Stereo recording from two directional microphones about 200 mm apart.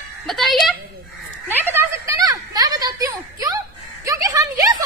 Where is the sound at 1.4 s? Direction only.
10° right (ahead or behind).